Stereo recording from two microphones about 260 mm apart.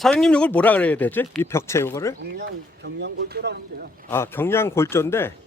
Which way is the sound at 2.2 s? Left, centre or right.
Right.